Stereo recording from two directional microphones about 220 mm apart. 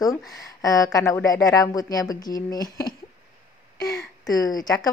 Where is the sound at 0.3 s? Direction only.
15° left (ahead or behind).